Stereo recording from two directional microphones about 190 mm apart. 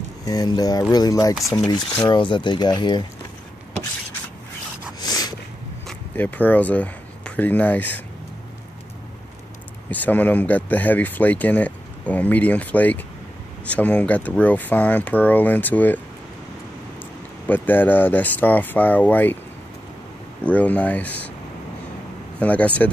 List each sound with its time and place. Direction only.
0.2 s speech: 20° left (ahead or behind)
5.0 s a sound: 20° left (ahead or behind)
5.9 s speech: 10° left (ahead or behind)
9.8 s speech: 10° left (ahead or behind)
17.5 s speech: 10° left (ahead or behind)
20.4 s speech: 10° left (ahead or behind)
22.4 s speech: 5° left (ahead or behind)